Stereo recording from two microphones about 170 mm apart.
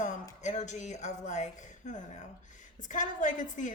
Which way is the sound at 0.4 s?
45° left (ahead or behind).